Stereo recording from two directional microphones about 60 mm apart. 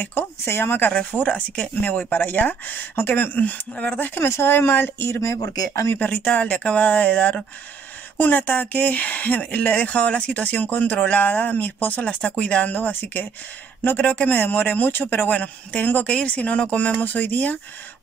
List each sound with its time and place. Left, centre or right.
0.1 s speech: left
1.2 s speech: left
4.2 s speech: left
6.0 s speech: left
13.9 s speech: left